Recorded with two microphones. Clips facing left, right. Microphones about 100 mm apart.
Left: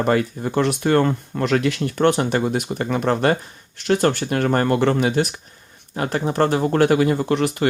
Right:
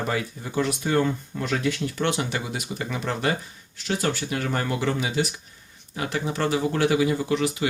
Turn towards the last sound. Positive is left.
turn(degrees=55)  # may be behind; listen again after turning